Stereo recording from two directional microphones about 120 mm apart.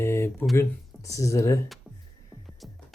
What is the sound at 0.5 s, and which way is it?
Speech, 25° left (ahead or behind).